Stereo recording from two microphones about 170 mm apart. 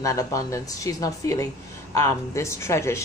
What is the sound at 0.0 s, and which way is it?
A woman's voice, 20° left (ahead or behind).